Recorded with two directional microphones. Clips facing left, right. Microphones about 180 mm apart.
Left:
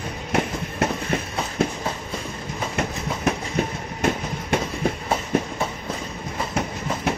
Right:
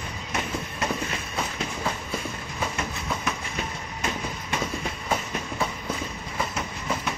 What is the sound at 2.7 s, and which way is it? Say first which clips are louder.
Train: left 4 dB; 60° left (ahead or behind).